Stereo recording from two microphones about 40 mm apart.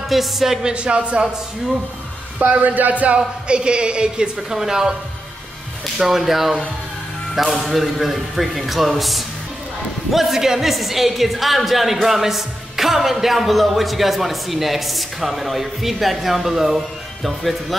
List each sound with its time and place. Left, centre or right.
0.1 s speech: centre
0.6 s speech: right
2.4 s speech: right
3.2 s speech: right
4.5 s speech: centre
5.9 s speech: centre